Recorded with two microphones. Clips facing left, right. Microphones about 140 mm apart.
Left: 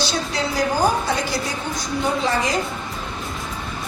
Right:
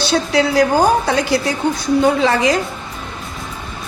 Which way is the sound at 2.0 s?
90° right.